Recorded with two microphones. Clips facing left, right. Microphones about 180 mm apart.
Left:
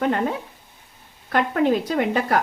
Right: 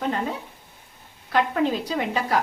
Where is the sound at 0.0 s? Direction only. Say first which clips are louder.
Left 4 dB; 60° left (ahead or behind).